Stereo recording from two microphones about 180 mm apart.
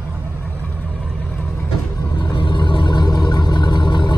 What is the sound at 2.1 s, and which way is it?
Vehicle, 25° left (ahead or behind).